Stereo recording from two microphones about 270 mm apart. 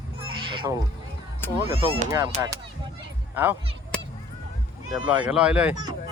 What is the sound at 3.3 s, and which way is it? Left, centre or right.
Speech, centre.